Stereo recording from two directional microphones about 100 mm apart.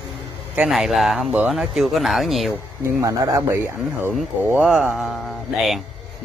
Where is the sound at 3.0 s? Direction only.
30° right (ahead or behind).